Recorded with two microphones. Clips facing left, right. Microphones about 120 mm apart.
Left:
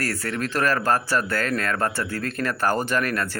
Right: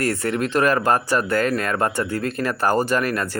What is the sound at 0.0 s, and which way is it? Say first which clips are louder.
Speech: right 5 dB; 20° right (ahead or behind).